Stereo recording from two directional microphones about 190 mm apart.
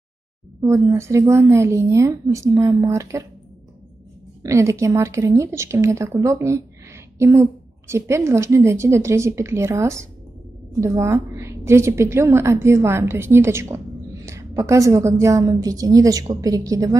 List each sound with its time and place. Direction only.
0.6 s a woman's voice: 15° right (ahead or behind)
4.4 s a woman's voice: 15° right (ahead or behind)
7.9 s a woman's voice: 15° right (ahead or behind)